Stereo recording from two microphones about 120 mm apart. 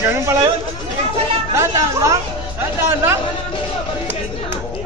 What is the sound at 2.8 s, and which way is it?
Speech, 20° right (ahead or behind).